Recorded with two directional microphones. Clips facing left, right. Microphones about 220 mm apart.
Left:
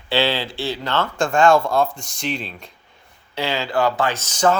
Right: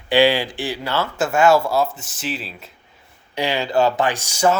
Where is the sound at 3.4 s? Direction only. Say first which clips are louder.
Right 2 dB; 15° right (ahead or behind).